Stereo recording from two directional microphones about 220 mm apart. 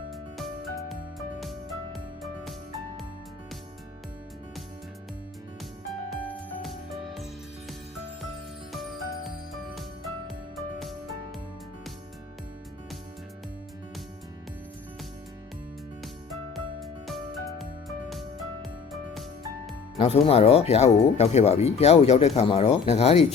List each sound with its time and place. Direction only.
0.1 s music: centre (ahead or behind)
6.1 s music: centre (ahead or behind)
8.7 s music: centre (ahead or behind)
16.3 s music: centre (ahead or behind)
20.0 s speech: 25° left (ahead or behind)